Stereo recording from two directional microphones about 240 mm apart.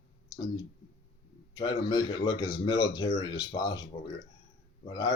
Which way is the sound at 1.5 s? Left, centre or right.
Centre.